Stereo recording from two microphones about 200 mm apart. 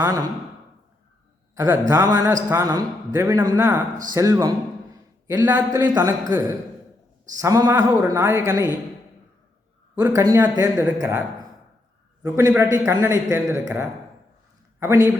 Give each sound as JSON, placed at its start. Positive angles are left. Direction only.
{"t": 0.0, "sound": "a man's voice", "side_deg": -15}
{"t": 1.5, "sound": "a man's voice", "side_deg": -10}
{"t": 5.5, "sound": "a man's voice", "side_deg": -20}
{"t": 10.0, "sound": "a man's voice", "side_deg": -15}